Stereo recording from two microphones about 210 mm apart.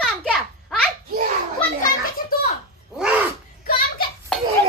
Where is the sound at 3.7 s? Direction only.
45° left (ahead or behind).